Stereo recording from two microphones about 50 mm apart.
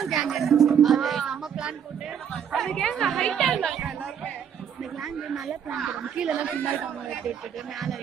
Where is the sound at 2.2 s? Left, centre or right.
Centre.